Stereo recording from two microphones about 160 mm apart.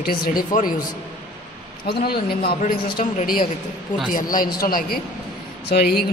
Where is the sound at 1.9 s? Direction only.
75° left (ahead or behind).